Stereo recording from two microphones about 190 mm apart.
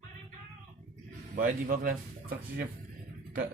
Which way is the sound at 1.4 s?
45° right (ahead or behind).